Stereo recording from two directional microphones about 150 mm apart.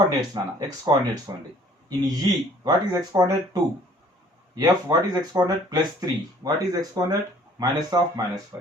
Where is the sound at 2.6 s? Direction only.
25° right (ahead or behind).